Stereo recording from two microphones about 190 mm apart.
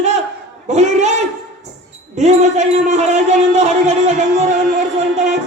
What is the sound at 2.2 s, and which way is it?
Music, 35° right (ahead or behind).